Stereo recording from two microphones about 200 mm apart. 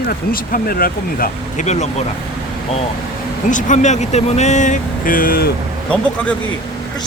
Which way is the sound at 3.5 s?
40° left (ahead or behind).